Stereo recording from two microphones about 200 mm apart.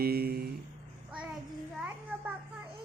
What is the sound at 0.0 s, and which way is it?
Music, 50° right (ahead or behind).